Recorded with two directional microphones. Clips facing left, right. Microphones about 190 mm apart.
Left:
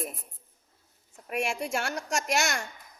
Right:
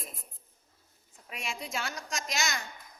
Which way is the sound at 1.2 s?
65° left (ahead or behind).